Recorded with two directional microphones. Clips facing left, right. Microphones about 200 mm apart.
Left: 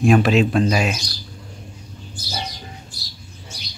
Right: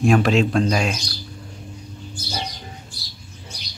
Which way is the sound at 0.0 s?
Centre (ahead or behind).